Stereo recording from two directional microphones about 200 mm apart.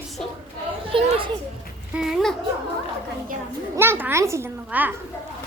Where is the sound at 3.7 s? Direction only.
10° right (ahead or behind).